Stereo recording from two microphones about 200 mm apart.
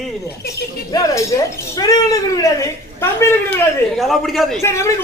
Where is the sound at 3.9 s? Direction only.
Centre (ahead or behind).